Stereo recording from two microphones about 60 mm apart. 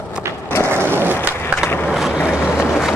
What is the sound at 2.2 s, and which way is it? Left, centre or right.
Boat, centre.